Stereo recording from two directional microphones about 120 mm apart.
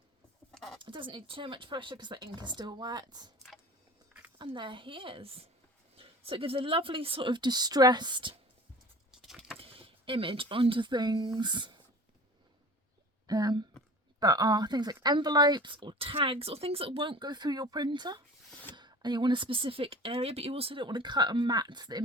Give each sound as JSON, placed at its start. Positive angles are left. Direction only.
{"t": 0.5, "sound": "a sound", "side_deg": 0}
{"t": 0.8, "sound": "speech", "side_deg": -45}
{"t": 4.4, "sound": "speech", "side_deg": -40}
{"t": 9.1, "sound": "keys jangling", "side_deg": 0}
{"t": 9.6, "sound": "speech", "side_deg": -50}
{"t": 13.2, "sound": "speech", "side_deg": -35}